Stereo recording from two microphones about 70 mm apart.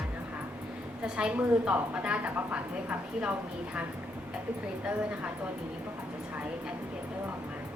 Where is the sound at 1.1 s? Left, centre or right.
Centre.